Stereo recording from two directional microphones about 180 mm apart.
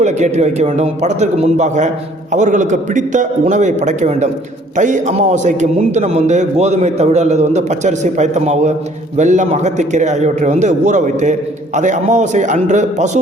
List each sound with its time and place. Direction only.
0.0 s a man's voice: 40° right (ahead or behind)